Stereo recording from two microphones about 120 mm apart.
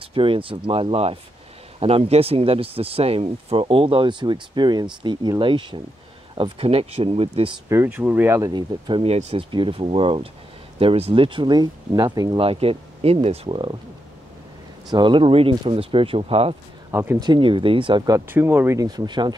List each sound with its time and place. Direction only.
0.0 s speech: 50° right (ahead or behind)
7.7 s speech: 15° right (ahead or behind)
8.4 s speech: 35° right (ahead or behind)
9.0 s speech: 60° right (ahead or behind)
9.5 s speech: 45° right (ahead or behind)
12.4 s speech: 55° right (ahead or behind)
14.9 s speech: 40° right (ahead or behind)
16.9 s speech: 20° right (ahead or behind)
17.2 s speech: 40° right (ahead or behind)
18.3 s speech: 15° right (ahead or behind)
18.8 s speech: 35° right (ahead or behind)